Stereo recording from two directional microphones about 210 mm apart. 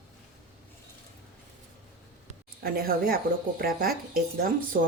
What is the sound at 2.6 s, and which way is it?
Speech, 45° right (ahead or behind).